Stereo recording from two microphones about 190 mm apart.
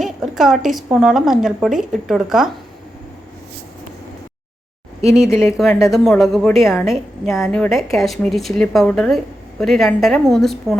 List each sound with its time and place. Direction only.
0.0 s a woman's voice: centre (ahead or behind)
4.9 s speech: 35° right (ahead or behind)
5.9 s a woman's voice: centre (ahead or behind)